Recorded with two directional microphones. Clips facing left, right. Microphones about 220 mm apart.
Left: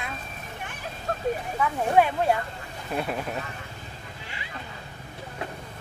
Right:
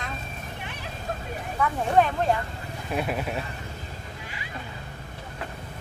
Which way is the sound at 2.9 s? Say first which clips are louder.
Right 1 dB; 5° right (ahead or behind).